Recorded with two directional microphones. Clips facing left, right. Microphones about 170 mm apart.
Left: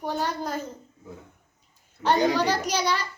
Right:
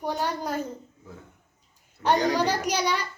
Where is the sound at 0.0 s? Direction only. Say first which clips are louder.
Even; 10° right (ahead or behind).